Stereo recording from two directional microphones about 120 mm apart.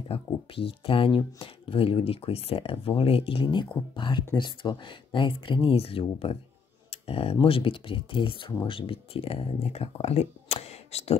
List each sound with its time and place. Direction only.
0.1 s speech: 50° left (ahead or behind)
6.9 s a sound: 55° left (ahead or behind)
7.4 s speech: 50° left (ahead or behind)